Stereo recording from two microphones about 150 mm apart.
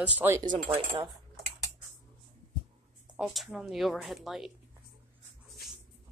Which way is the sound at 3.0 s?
Centre (ahead or behind).